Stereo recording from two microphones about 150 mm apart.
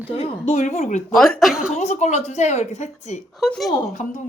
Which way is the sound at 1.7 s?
50° left (ahead or behind).